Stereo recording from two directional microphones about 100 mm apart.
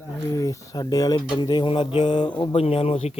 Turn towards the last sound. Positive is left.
turn(degrees=85)